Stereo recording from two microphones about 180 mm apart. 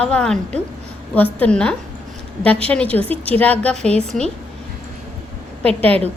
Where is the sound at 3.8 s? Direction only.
35° right (ahead or behind).